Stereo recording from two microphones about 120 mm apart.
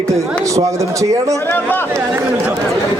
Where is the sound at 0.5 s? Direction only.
25° right (ahead or behind).